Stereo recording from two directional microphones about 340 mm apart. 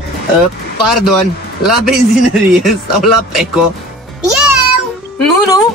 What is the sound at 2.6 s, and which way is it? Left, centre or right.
Speech, centre.